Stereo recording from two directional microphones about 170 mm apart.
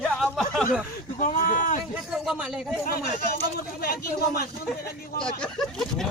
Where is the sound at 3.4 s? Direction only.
60° left (ahead or behind).